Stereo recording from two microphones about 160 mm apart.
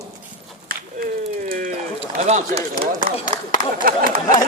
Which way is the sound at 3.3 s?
30° right (ahead or behind).